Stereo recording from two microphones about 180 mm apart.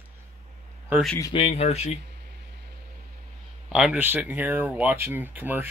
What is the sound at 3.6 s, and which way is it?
Speech, 5° right (ahead or behind).